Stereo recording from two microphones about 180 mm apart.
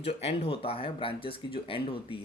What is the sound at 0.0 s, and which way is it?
Speech, 35° left (ahead or behind).